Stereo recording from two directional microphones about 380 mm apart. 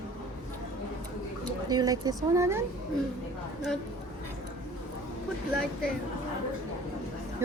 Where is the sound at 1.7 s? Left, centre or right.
Centre.